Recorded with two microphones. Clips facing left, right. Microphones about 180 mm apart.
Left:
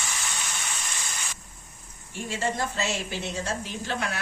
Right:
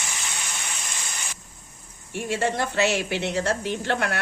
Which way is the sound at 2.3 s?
65° right (ahead or behind).